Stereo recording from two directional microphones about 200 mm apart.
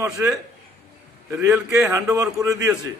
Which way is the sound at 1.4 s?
10° right (ahead or behind).